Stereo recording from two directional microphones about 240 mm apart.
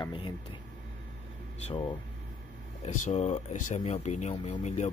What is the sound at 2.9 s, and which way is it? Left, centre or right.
Speech, left.